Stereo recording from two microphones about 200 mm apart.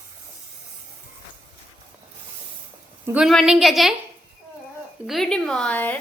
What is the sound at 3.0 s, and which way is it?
Speech, 5° right (ahead or behind).